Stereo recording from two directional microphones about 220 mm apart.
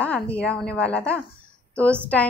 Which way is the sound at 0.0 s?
5° left (ahead or behind).